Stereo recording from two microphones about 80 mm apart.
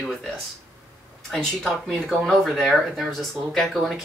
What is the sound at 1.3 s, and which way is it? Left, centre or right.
Speech, centre.